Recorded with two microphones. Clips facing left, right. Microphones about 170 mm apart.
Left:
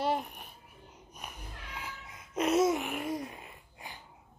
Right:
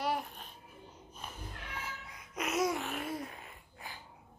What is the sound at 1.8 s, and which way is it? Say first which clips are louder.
Babbling: left 2 dB; 20° left (ahead or behind).